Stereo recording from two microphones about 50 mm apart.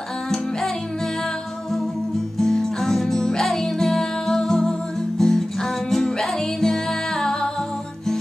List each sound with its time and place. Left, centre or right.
2.3 s music: centre